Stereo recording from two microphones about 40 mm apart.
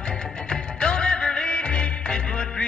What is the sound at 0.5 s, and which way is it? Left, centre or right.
Music, left.